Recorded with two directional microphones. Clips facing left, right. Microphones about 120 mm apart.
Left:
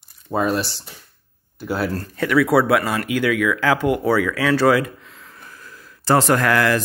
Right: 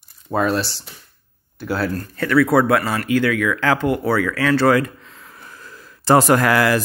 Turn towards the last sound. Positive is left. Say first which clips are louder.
# right 2 dB
turn(degrees=-10)  # may be behind; listen again after turning